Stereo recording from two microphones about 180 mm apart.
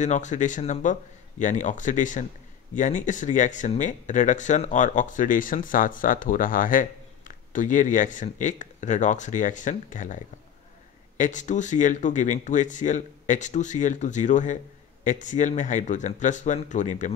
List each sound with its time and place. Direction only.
0.0 s speech: 40° left (ahead or behind)